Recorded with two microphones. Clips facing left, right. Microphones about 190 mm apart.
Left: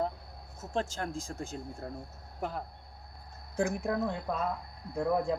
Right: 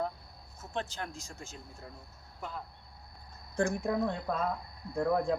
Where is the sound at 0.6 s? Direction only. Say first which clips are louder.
Left 4 dB; 40° left (ahead or behind).